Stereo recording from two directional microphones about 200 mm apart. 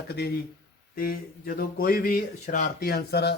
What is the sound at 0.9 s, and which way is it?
Speech, 45° left (ahead or behind).